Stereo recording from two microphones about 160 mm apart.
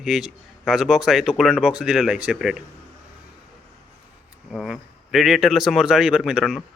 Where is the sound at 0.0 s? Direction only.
5° right (ahead or behind).